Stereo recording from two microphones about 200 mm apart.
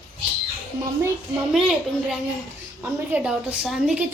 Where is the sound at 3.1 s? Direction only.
5° right (ahead or behind).